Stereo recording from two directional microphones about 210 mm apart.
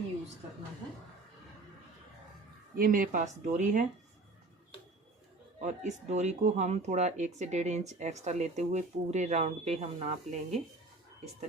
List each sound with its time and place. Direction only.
2.7 s speech: 40° right (ahead or behind)
5.5 s speech: 35° right (ahead or behind)